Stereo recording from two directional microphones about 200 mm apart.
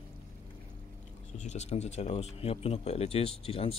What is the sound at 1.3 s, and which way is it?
Speech, 35° left (ahead or behind).